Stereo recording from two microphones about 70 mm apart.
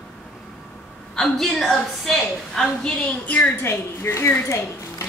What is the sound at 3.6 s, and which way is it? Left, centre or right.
A woman's voice, left.